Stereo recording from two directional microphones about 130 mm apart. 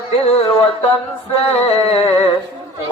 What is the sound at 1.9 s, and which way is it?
Mantra, 50° left (ahead or behind).